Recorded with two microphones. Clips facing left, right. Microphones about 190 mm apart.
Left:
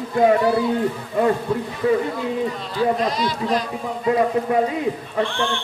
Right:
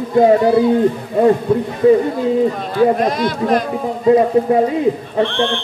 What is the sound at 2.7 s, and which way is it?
Speech, 55° right (ahead or behind).